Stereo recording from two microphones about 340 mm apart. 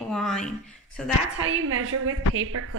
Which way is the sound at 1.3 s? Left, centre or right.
Right.